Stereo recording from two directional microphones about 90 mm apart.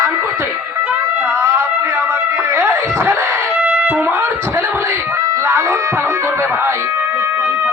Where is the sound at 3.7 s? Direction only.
20° right (ahead or behind).